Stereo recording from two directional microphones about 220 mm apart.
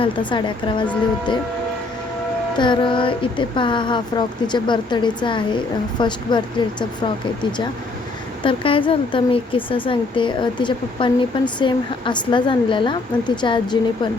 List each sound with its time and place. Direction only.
0.0 s speech: 20° left (ahead or behind)
2.6 s speech: 20° left (ahead or behind)
8.4 s speech: 25° left (ahead or behind)